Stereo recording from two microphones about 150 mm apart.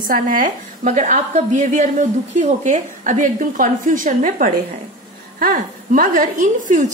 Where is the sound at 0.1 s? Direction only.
65° right (ahead or behind).